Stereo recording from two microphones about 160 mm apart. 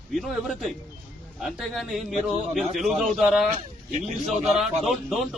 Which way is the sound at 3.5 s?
45° right (ahead or behind).